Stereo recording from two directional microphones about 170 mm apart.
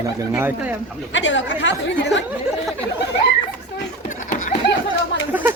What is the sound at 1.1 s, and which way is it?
Speech, 90° left.